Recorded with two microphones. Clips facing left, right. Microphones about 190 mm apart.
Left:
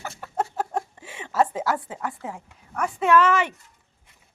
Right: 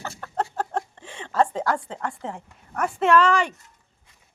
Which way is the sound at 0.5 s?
5° left (ahead or behind).